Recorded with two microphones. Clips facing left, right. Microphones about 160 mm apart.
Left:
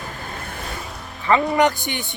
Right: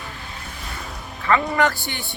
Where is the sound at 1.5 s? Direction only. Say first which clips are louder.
Left 3 dB; 20° left (ahead or behind).